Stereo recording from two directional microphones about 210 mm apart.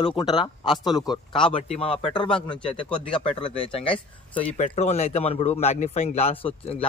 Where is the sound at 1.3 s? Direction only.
25° left (ahead or behind).